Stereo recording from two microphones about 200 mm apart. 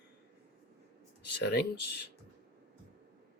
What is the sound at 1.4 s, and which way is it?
Speech, 55° left (ahead or behind).